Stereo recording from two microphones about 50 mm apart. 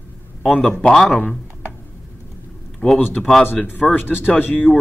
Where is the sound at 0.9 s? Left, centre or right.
Centre.